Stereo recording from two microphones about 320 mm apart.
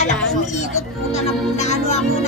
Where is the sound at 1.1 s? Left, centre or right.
Left.